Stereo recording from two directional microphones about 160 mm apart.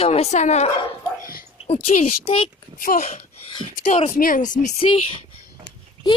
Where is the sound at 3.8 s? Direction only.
40° left (ahead or behind).